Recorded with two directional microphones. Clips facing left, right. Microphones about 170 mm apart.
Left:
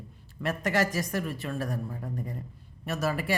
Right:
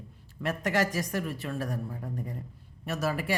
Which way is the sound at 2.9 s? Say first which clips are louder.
Left 1 dB; 10° right (ahead or behind).